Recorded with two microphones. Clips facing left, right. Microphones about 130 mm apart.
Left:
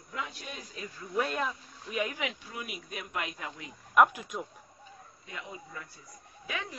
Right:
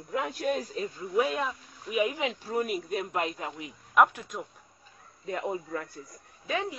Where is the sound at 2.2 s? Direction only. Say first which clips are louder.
Right 5 dB; 30° right (ahead or behind).